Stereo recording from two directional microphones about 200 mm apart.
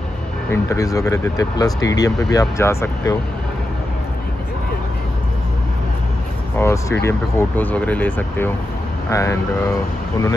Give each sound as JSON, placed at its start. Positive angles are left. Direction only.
{"t": 0.5, "sound": "speech", "side_deg": 15}
{"t": 6.6, "sound": "speech", "side_deg": 15}